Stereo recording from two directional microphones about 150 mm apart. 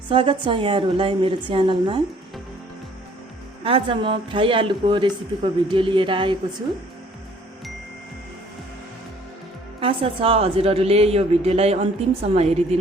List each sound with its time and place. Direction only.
0.1 s a woman's voice: 35° right (ahead or behind)
3.6 s a woman's voice: 40° right (ahead or behind)
9.8 s a woman's voice: 40° right (ahead or behind)